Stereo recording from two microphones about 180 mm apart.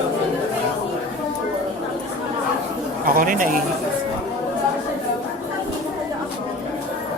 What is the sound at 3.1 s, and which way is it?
Speech, 50° right (ahead or behind).